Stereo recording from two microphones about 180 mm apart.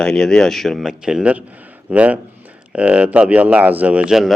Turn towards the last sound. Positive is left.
turn(degrees=0)  # may be behind; listen again after turning